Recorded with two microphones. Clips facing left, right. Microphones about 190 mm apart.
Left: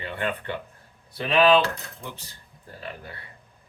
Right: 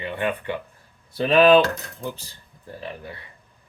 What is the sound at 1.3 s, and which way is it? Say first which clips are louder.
Cutlery: right 4 dB; 45° right (ahead or behind).